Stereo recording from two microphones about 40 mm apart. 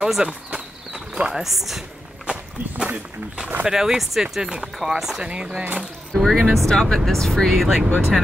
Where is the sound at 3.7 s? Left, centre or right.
Centre.